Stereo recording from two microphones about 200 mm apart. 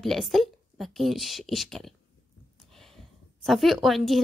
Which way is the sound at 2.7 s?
Centre (ahead or behind).